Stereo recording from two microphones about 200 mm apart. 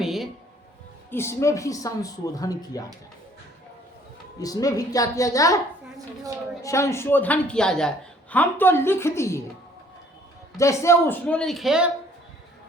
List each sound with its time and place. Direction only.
0.0 s a sound: centre (ahead or behind)
1.1 s a woman's voice: 15° left (ahead or behind)
4.4 s a woman's voice: 20° left (ahead or behind)
6.6 s a woman's voice: 15° left (ahead or behind)
10.6 s speech: 15° left (ahead or behind); by 11.9 s centre (ahead or behind)